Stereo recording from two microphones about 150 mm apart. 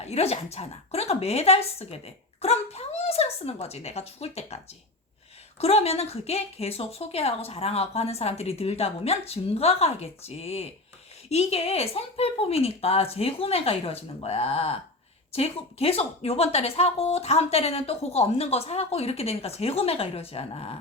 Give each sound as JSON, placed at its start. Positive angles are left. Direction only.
{"t": 0.0, "sound": "a woman's voice", "side_deg": 45}